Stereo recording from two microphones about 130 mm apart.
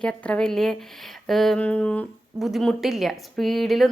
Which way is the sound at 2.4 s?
Centre (ahead or behind).